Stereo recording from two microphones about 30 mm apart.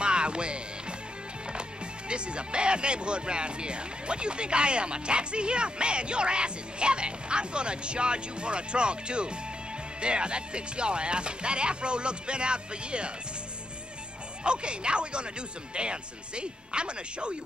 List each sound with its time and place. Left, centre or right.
0.0 s music: right
1.5 s speech: right
14.4 s speech: right